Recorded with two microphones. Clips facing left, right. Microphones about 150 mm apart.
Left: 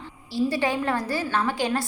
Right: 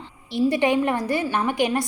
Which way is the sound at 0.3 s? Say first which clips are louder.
Right 4 dB; 20° right (ahead or behind).